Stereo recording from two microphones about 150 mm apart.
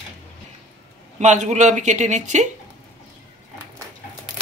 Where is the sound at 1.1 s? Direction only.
50° right (ahead or behind).